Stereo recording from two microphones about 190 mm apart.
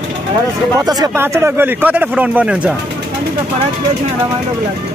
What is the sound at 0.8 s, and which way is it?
Speech, 20° right (ahead or behind).